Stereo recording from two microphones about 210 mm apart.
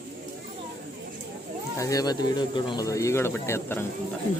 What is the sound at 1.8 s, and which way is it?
Speech, 15° left (ahead or behind).